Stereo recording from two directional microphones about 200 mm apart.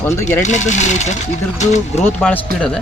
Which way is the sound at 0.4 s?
35° left (ahead or behind).